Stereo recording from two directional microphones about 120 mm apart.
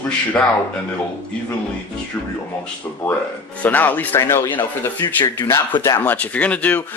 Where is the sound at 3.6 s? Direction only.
15° left (ahead or behind).